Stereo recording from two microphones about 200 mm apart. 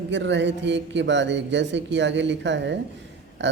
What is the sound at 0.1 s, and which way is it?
Speech, 65° right (ahead or behind).